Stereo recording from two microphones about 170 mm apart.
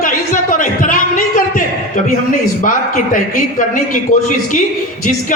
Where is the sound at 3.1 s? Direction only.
50° left (ahead or behind).